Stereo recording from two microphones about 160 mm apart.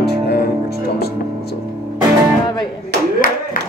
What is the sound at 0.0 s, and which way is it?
Music, 80° left.